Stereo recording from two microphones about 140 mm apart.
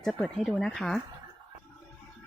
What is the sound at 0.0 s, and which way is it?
Speech, 5° left (ahead or behind).